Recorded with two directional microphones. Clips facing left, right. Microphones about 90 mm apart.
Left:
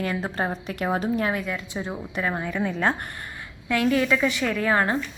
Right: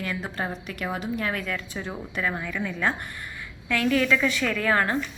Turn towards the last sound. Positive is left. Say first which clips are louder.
# left 1 dB
turn(degrees=20)  # may be behind; listen again after turning